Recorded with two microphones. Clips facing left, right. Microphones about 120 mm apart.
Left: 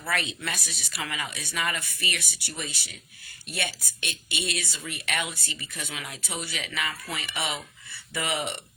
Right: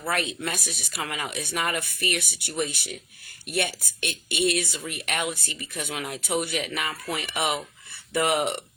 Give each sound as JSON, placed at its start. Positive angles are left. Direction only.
{"t": 0.1, "sound": "speech", "side_deg": -50}
{"t": 1.3, "sound": "speech", "side_deg": -15}
{"t": 1.5, "sound": "speech", "side_deg": -55}